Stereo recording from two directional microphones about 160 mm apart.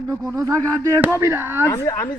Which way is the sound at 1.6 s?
20° left (ahead or behind).